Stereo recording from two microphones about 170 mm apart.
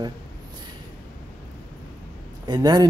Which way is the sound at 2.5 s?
25° right (ahead or behind).